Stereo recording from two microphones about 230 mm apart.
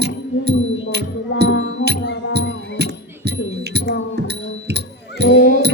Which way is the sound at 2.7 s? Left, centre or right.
Right.